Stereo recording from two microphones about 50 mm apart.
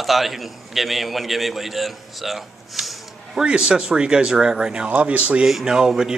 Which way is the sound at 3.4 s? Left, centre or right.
Centre.